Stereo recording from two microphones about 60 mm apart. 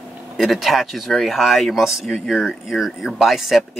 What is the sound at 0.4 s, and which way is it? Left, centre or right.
Speech, centre.